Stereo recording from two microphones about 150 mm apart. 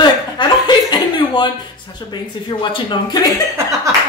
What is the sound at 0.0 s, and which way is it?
Chuckle, 30° left (ahead or behind).